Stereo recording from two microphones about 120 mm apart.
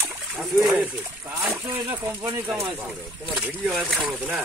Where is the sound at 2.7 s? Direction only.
Centre (ahead or behind).